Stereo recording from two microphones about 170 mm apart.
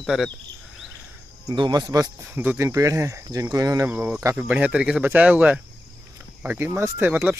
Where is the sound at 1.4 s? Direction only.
25° right (ahead or behind).